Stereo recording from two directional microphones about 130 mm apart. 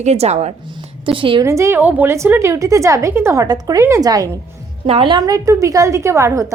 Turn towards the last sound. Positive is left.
turn(degrees=-25)  # may be behind; listen again after turning